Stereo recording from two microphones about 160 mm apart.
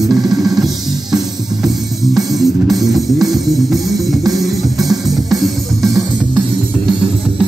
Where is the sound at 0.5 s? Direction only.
Centre (ahead or behind).